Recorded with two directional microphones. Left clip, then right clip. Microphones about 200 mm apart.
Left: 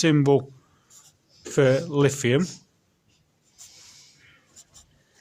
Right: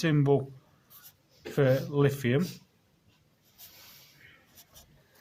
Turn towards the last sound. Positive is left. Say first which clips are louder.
# left 4 dB
turn(degrees=-15)  # may be behind; listen again after turning